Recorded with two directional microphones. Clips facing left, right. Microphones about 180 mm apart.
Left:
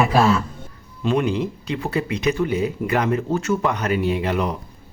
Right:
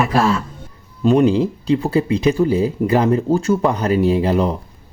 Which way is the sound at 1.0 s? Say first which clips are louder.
Right 7 dB; 40° right (ahead or behind).